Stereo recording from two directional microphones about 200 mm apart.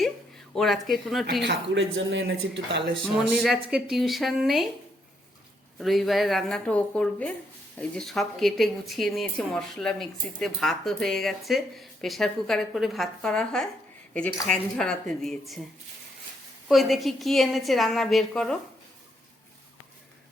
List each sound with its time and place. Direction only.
0.5 s a woman's voice: centre (ahead or behind)
1.5 s speech: 65° right (ahead or behind)
3.0 s a woman's voice: centre (ahead or behind)
5.8 s a woman's voice: centre (ahead or behind)
16.6 s a woman's voice: centre (ahead or behind)